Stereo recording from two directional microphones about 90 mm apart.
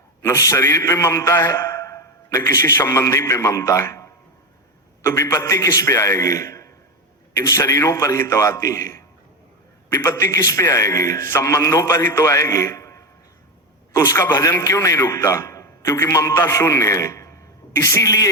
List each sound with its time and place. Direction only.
0.2 s a man's voice: 35° left (ahead or behind)